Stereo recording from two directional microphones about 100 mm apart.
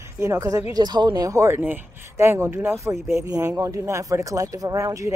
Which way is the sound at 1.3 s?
25° right (ahead or behind).